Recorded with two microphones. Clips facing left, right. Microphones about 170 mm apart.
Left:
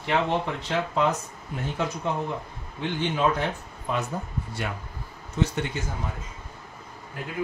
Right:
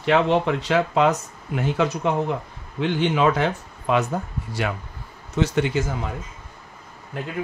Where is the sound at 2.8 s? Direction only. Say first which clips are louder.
Right 6 dB; 90° right.